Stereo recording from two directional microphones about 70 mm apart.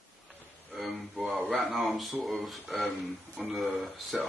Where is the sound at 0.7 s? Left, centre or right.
Centre.